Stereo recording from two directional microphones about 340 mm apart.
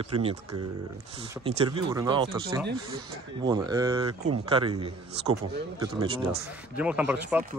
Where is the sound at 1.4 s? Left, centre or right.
Centre.